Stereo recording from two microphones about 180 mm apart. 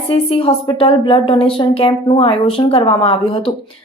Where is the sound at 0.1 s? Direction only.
30° left (ahead or behind).